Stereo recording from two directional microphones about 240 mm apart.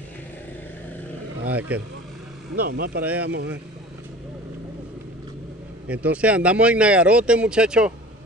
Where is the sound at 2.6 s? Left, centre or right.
Right.